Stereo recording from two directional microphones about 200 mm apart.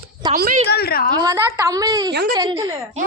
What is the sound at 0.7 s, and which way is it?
Speech, 50° left (ahead or behind).